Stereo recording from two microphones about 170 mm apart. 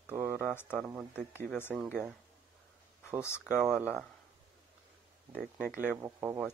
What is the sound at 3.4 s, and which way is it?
Speech, 5° right (ahead or behind).